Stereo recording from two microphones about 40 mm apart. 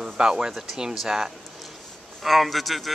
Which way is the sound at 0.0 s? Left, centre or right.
Centre.